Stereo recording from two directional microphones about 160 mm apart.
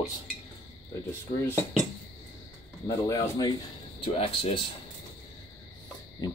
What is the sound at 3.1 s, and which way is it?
Speech, 25° left (ahead or behind).